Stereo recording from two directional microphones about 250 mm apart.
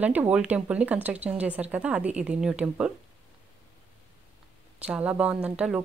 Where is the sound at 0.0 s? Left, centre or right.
Centre.